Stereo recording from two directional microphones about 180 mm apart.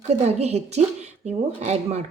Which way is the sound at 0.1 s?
40° right (ahead or behind).